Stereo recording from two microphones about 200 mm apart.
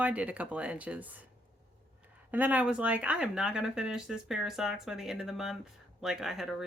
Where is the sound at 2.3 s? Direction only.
10° right (ahead or behind).